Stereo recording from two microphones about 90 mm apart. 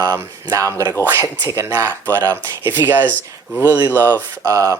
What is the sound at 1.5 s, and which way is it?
Speech, 30° right (ahead or behind).